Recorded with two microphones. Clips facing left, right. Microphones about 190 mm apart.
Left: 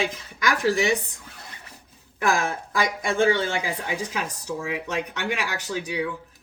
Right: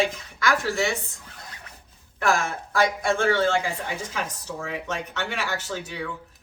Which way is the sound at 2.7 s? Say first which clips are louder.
Right 6 dB; 15° left (ahead or behind).